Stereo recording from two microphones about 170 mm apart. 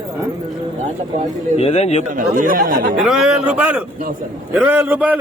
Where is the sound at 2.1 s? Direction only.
50° right (ahead or behind).